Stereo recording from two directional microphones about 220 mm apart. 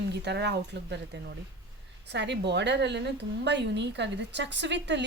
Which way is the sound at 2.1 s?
50° right (ahead or behind).